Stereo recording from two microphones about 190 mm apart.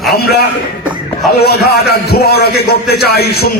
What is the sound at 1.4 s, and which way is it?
A man's voice, 55° left (ahead or behind).